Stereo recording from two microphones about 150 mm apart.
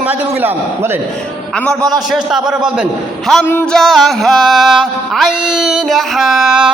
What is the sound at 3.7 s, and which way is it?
Speech, centre (ahead or behind).